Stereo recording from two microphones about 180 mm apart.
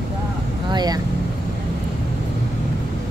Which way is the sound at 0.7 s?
25° right (ahead or behind).